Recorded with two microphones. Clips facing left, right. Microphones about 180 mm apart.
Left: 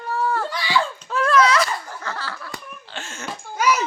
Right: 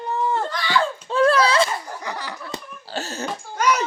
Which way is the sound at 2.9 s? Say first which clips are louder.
Right 7 dB; 35° right (ahead or behind).